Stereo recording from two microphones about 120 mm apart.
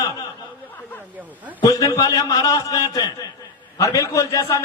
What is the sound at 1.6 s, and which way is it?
A man's voice, 25° left (ahead or behind).